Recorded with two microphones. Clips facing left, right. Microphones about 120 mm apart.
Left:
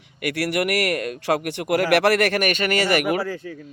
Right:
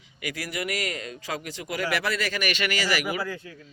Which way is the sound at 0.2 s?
65° left (ahead or behind).